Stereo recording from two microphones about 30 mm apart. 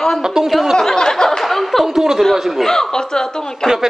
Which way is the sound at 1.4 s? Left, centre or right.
Centre.